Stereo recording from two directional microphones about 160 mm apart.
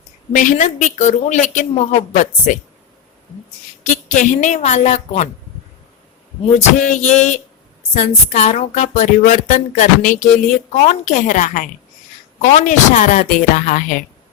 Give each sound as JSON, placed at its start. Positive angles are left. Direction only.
{"t": 0.3, "sound": "speech", "side_deg": 50}
{"t": 3.8, "sound": "speech", "side_deg": 50}
{"t": 6.6, "sound": "speech", "side_deg": 45}